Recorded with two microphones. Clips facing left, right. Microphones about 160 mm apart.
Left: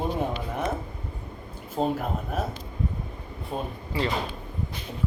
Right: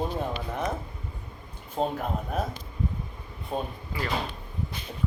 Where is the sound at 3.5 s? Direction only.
Centre (ahead or behind).